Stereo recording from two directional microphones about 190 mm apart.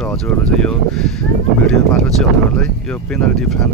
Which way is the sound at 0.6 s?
5° left (ahead or behind).